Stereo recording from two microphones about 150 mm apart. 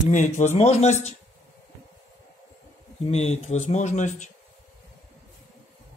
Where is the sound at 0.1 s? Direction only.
55° left (ahead or behind).